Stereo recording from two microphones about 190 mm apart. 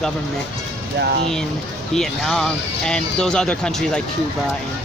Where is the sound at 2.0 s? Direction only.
Centre (ahead or behind).